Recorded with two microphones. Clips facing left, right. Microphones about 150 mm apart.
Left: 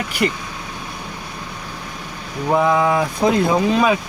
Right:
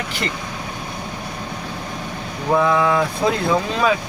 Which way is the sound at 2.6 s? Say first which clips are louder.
Left 1 dB; 20° left (ahead or behind).